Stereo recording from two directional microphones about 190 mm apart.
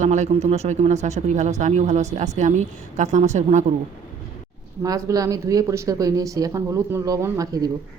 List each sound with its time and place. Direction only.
0.0 s speech: 40° right (ahead or behind)
4.8 s speech: 15° right (ahead or behind)